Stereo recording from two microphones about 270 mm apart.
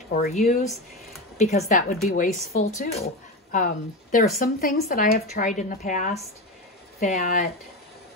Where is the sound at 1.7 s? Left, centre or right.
Left.